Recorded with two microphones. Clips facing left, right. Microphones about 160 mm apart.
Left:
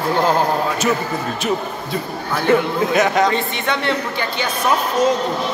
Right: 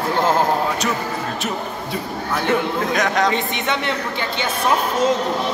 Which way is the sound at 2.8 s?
5° left (ahead or behind).